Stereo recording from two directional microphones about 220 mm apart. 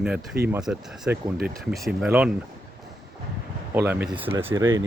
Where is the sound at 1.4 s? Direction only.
45° right (ahead or behind).